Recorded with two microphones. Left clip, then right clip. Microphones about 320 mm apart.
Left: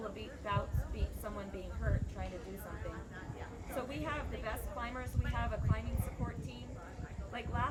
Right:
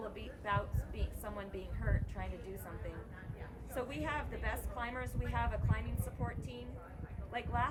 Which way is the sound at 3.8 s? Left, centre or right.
Centre.